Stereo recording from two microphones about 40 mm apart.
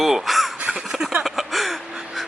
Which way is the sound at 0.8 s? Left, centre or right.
Centre.